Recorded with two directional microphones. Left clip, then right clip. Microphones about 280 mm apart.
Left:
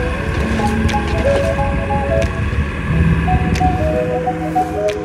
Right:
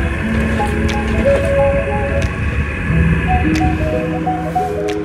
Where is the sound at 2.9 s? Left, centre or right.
Left.